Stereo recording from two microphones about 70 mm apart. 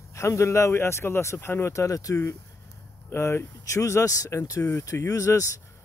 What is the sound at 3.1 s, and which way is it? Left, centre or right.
Speech, left.